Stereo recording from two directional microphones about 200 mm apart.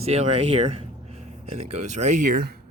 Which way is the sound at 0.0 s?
30° right (ahead or behind).